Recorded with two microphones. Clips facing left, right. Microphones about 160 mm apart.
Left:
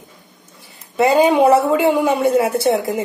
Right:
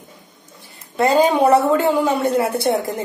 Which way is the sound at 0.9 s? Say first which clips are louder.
Left 2 dB; 5° left (ahead or behind).